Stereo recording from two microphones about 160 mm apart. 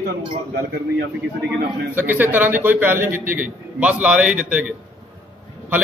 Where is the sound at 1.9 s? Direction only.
10° right (ahead or behind).